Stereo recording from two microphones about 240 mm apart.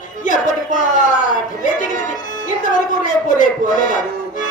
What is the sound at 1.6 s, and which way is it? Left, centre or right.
Music, left.